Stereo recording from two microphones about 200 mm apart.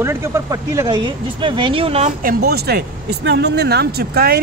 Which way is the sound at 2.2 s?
50° right (ahead or behind).